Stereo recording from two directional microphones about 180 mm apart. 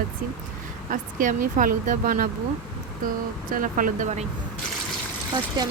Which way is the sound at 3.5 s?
50° right (ahead or behind).